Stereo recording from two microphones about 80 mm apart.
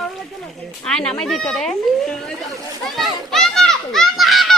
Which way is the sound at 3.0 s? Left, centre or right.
Centre.